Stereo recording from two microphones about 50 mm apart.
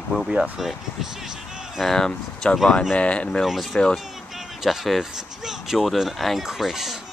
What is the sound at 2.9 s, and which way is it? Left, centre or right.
Speech, left.